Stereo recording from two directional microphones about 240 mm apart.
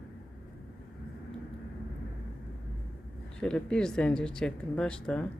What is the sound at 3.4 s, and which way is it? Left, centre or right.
Speech, centre.